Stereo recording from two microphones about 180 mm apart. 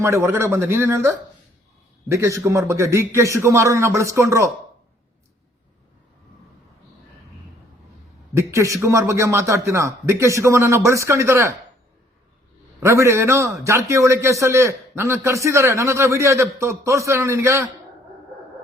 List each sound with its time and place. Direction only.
0.0 s a man's voice: 15° right (ahead or behind)
8.4 s a man's voice: 15° right (ahead or behind)
12.8 s a man's voice: 15° right (ahead or behind)